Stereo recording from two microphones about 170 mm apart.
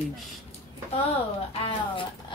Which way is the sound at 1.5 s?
30° left (ahead or behind).